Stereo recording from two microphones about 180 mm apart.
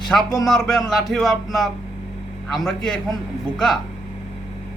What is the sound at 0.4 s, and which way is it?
Speech, centre (ahead or behind).